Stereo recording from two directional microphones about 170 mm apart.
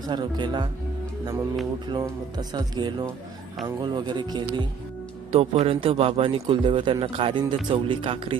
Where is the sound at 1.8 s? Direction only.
25° right (ahead or behind).